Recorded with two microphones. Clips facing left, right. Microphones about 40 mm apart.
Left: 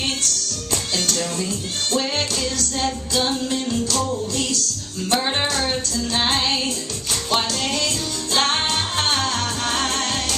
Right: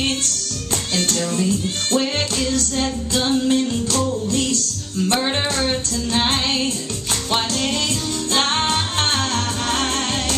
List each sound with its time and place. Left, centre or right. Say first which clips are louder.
0.9 s speech: right 4 dB; right
2.0 s music: right 2 dB; right
3.2 s music: right 3 dB; centre
3.5 s music: right 3 dB; right
8.3 s music: right 1 dB; right